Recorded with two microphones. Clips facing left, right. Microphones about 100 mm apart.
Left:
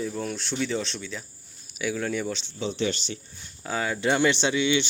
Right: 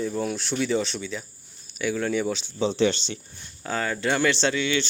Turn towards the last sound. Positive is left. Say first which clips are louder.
# left 1 dB
turn(degrees=15)  # may be behind; listen again after turning